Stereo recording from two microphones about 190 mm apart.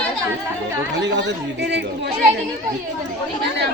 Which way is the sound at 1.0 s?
65° right (ahead or behind).